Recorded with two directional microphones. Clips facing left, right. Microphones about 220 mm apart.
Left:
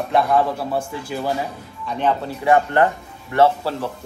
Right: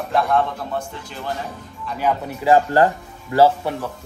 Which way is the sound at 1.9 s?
10° right (ahead or behind).